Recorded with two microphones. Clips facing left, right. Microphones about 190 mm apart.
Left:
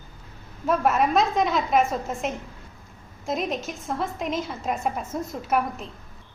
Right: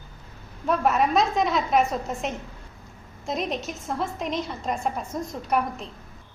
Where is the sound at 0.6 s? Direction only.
Centre (ahead or behind).